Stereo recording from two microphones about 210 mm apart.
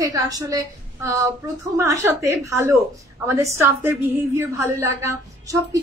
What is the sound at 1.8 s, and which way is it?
A woman's voice, 15° right (ahead or behind).